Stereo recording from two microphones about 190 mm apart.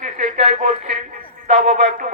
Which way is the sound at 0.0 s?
40° right (ahead or behind).